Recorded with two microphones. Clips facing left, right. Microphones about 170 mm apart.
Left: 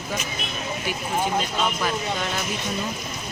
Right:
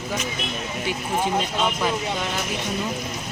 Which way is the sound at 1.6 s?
20° right (ahead or behind).